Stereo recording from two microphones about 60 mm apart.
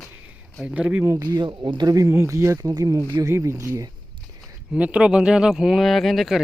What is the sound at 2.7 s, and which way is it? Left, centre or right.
Speech, right.